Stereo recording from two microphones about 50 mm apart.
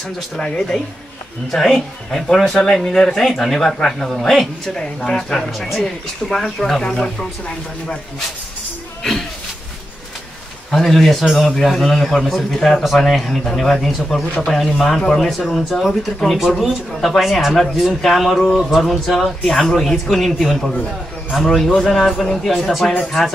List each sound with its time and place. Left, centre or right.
1.5 s speech: centre
10.7 s a man's voice: centre